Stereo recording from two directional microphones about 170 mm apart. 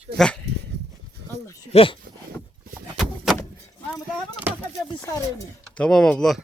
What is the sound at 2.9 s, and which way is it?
Door, centre (ahead or behind).